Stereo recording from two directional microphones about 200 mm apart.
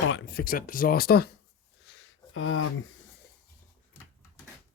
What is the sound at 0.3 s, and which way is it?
Speech, 45° left (ahead or behind).